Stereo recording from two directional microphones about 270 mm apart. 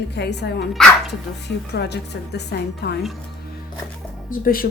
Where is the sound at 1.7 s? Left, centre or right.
Left.